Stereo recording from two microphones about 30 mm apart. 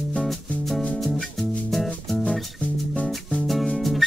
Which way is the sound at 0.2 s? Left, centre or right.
Centre.